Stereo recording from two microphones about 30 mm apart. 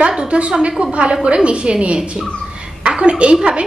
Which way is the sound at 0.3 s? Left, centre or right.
Right.